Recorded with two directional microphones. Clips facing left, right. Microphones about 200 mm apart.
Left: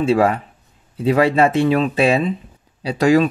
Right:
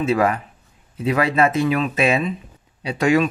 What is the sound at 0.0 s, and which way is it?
Speech, 30° left (ahead or behind).